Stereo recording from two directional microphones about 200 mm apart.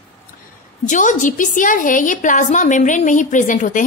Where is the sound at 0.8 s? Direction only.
40° left (ahead or behind).